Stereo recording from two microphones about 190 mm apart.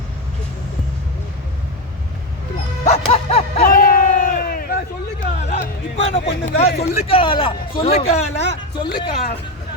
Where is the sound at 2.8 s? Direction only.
30° left (ahead or behind).